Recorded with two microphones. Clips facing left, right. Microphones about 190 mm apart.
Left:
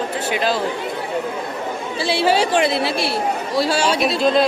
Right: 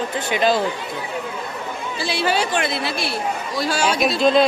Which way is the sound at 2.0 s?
30° left (ahead or behind).